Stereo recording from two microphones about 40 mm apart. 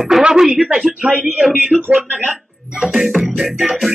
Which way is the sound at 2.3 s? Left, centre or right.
Centre.